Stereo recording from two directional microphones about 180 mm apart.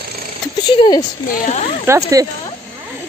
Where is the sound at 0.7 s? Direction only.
25° left (ahead or behind).